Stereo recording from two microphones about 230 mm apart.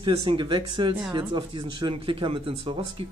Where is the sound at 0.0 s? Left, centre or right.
Right.